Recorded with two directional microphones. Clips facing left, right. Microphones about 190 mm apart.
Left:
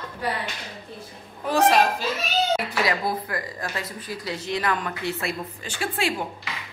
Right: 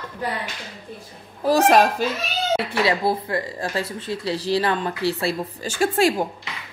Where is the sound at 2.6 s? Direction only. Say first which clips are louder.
Right 4 dB; 30° right (ahead or behind).